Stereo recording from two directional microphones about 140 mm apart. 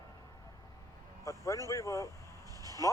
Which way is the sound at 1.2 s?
20° left (ahead or behind).